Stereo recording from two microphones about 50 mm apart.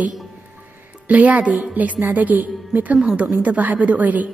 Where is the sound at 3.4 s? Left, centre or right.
Right.